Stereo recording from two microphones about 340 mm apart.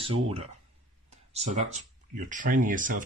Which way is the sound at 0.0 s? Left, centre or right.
Centre.